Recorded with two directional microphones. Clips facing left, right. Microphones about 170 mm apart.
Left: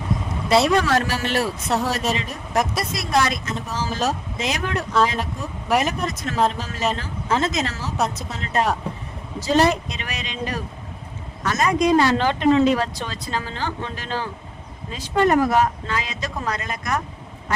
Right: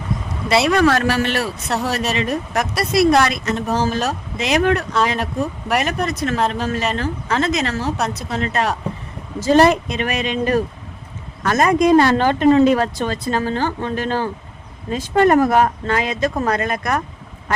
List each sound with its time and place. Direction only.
0.6 s speech: 65° right (ahead or behind)
1.4 s speech: centre (ahead or behind)
1.9 s speech: 70° right (ahead or behind)
9.4 s speech: 55° right (ahead or behind)